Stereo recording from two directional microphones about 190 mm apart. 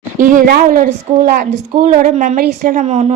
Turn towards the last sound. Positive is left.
turn(degrees=-35)  # may be behind; listen again after turning